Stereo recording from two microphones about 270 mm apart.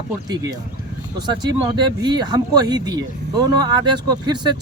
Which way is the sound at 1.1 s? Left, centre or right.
Centre.